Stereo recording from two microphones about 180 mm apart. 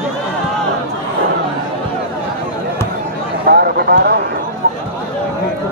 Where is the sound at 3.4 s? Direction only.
60° right (ahead or behind).